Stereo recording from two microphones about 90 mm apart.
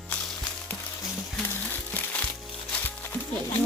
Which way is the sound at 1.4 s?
25° left (ahead or behind).